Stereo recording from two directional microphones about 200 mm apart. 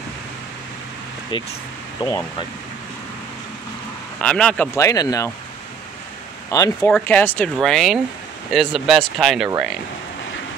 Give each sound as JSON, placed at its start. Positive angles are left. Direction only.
{"t": 1.3, "sound": "speech", "side_deg": 25}
{"t": 2.0, "sound": "speech", "side_deg": 15}
{"t": 4.2, "sound": "speech", "side_deg": 5}
{"t": 4.7, "sound": "speech", "side_deg": 15}
{"t": 6.8, "sound": "speech", "side_deg": 5}